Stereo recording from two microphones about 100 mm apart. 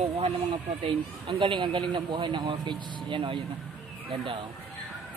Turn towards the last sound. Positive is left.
turn(degrees=-55)  # may be behind; listen again after turning